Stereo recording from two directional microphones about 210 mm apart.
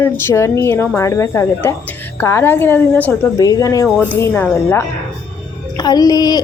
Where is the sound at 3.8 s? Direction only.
5° left (ahead or behind).